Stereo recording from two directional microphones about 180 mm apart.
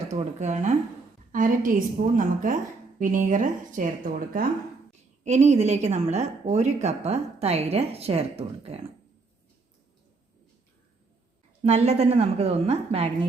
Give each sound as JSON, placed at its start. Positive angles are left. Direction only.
{"t": 0.1, "sound": "a woman's voice", "side_deg": -40}
{"t": 11.6, "sound": "a woman's voice", "side_deg": -40}